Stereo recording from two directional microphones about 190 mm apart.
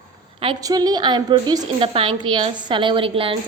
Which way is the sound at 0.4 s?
20° right (ahead or behind).